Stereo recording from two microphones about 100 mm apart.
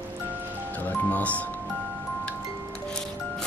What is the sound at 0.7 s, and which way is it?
Music, 15° left (ahead or behind).